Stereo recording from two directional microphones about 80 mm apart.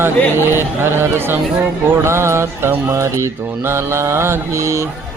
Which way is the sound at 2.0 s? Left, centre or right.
Right.